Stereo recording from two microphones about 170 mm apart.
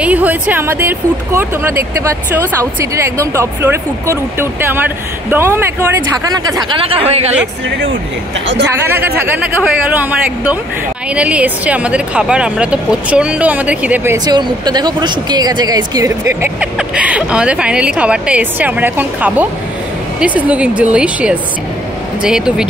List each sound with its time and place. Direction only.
0.0 s speech: 10° right (ahead or behind)
6.8 s speech: 35° right (ahead or behind)
8.8 s speech: 10° right (ahead or behind)
14.1 s speech: 25° right (ahead or behind); by 22.7 s 5° right (ahead or behind)